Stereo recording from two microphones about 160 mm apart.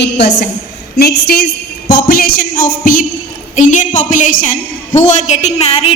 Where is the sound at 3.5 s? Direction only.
50° left (ahead or behind).